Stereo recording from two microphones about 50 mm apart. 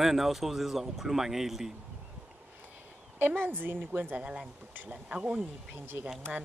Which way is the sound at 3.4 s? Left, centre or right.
Right.